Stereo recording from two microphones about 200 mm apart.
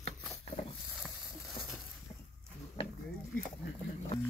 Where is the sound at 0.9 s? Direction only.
Centre (ahead or behind).